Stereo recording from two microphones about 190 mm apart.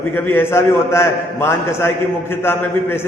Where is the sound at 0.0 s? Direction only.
10° left (ahead or behind).